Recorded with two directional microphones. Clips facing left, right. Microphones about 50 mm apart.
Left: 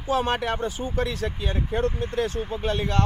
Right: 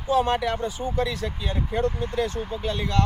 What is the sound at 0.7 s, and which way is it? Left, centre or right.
Speech, left.